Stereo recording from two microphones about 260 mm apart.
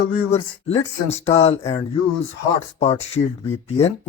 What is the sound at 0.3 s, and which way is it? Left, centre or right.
Speech, left.